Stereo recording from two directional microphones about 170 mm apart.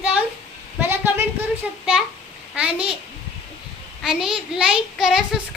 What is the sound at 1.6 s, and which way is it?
A child's voice, 5° right (ahead or behind).